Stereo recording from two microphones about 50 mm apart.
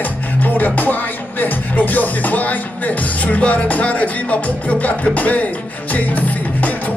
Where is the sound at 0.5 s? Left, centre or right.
Left.